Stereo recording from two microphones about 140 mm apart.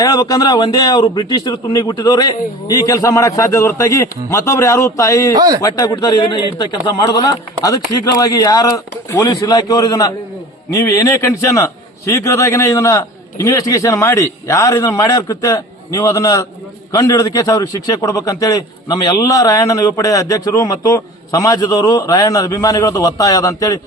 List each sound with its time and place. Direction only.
0.0 s a man's voice: 25° left (ahead or behind)
5.3 s speech: 25° right (ahead or behind)
5.6 s a man's voice: 25° left (ahead or behind)